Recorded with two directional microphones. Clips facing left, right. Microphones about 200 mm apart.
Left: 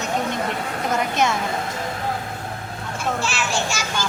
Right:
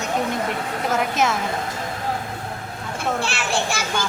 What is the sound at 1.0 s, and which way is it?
Speech, 5° right (ahead or behind).